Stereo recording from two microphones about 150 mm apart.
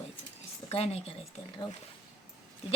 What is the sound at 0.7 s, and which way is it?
Speech, 45° left (ahead or behind).